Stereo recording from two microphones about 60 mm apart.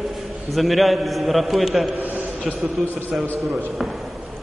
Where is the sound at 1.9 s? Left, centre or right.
Right.